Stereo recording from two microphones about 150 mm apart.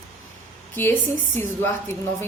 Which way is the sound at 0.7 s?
15° left (ahead or behind).